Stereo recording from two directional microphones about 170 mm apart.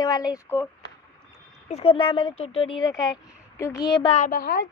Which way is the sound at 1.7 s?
35° left (ahead or behind).